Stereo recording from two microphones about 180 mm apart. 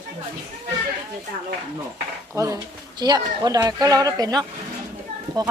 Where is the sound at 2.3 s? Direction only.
20° right (ahead or behind).